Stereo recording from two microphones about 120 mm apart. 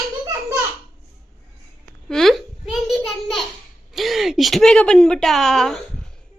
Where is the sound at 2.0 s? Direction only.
5° left (ahead or behind).